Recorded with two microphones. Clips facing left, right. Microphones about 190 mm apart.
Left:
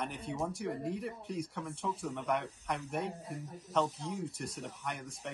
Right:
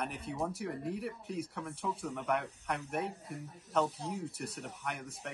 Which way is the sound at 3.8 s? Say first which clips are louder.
Right 1 dB; 35° right (ahead or behind).